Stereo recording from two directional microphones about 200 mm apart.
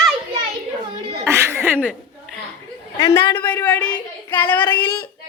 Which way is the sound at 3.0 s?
10° left (ahead or behind).